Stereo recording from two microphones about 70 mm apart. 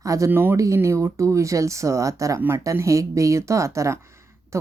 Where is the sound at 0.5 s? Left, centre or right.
Right.